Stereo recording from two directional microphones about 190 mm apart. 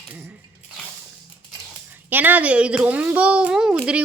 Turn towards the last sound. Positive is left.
turn(degrees=-5)  # may be behind; listen again after turning